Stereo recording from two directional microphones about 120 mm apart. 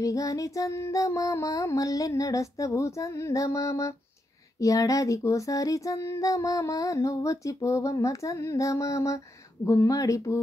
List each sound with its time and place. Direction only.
0.0 s child singing: 25° left (ahead or behind)